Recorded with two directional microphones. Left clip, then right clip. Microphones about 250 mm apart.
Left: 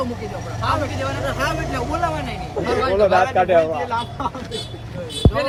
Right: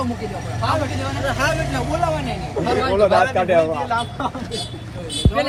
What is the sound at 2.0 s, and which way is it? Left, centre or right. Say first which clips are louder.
Speech: right 3 dB; centre.